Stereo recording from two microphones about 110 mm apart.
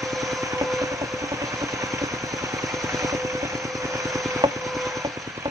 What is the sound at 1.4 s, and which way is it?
Vehicle, 30° right (ahead or behind).